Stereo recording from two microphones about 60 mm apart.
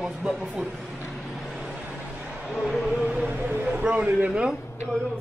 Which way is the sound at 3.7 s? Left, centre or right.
Centre.